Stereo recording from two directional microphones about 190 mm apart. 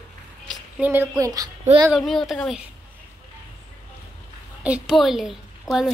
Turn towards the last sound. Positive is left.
turn(degrees=0)  # may be behind; listen again after turning